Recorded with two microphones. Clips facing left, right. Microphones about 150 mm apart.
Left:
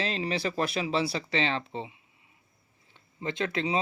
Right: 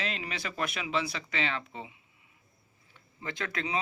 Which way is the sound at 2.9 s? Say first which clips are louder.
Left 6 dB; 25° left (ahead or behind).